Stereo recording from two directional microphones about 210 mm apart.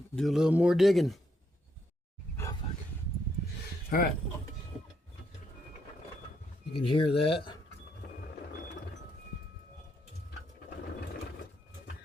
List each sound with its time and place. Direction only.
0.2 s speech: centre (ahead or behind)
2.3 s wild animals: 10° left (ahead or behind)
3.8 s speech: 45° left (ahead or behind)
6.7 s speech: 25° left (ahead or behind)